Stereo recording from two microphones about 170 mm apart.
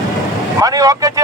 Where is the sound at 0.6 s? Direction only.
20° right (ahead or behind).